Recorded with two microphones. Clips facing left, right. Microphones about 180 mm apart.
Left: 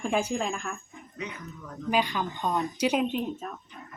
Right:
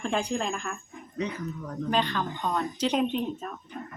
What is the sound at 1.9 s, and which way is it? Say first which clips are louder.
Speech: left 1 dB; 10° left (ahead or behind).